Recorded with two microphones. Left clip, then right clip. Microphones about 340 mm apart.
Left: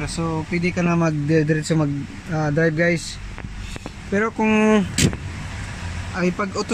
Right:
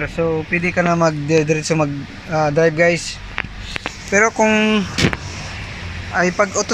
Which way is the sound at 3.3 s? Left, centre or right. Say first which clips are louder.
Right 11 dB; right.